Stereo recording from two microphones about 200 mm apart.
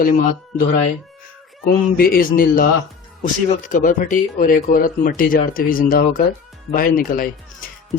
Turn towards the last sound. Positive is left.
turn(degrees=45)  # may be behind; listen again after turning